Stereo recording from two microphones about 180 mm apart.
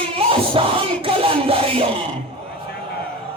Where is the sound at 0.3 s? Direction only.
30° right (ahead or behind).